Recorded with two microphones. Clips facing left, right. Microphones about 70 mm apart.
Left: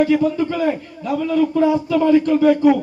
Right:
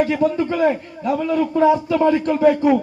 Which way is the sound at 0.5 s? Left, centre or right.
Centre.